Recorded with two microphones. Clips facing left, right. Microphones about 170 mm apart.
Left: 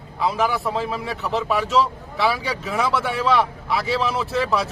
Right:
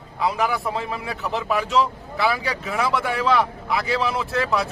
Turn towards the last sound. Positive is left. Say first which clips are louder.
# left 1 dB
turn(degrees=0)  # may be behind; listen again after turning